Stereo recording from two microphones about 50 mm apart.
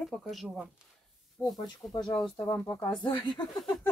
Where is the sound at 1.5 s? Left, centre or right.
Centre.